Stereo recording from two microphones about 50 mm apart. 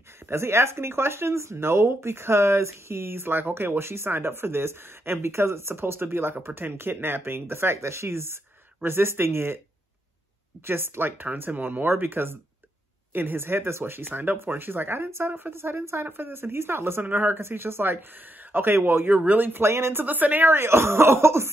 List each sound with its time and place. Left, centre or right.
0.3 s speech: right
10.6 s speech: right
11.2 s a man's voice: right
19.1 s a woman's voice: right
19.6 s speech: right
19.9 s a woman's voice: right
20.4 s speech: right